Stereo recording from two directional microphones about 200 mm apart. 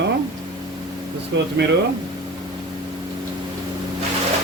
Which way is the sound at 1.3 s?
65° right (ahead or behind).